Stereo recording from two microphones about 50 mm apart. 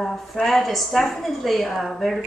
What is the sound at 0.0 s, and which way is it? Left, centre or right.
A woman's voice, centre.